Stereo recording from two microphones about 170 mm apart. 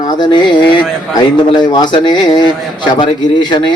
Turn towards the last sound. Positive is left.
turn(degrees=25)  # may be behind; listen again after turning